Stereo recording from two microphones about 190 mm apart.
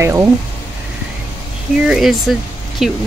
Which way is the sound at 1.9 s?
Centre (ahead or behind).